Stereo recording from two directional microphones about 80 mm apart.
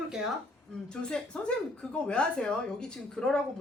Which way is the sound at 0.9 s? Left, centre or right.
Centre.